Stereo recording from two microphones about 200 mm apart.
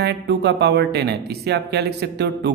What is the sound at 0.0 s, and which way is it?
Speech, 55° right (ahead or behind).